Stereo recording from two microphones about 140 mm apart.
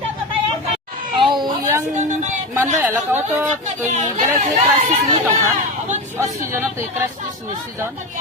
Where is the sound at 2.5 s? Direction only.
15° right (ahead or behind).